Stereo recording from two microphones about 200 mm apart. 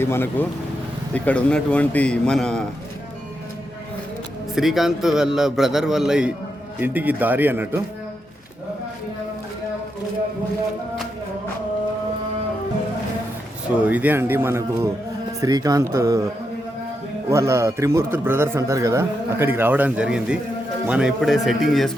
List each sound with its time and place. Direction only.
0.0 s a man's voice: 10° left (ahead or behind)
4.5 s a man's voice: centre (ahead or behind)
13.8 s a man's voice: 10° right (ahead or behind)